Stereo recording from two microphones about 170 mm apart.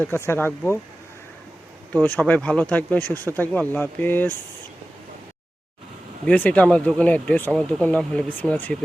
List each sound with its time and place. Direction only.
0.0 s speech: 10° left (ahead or behind)
1.9 s speech: 10° left (ahead or behind)
6.2 s speech: 5° left (ahead or behind)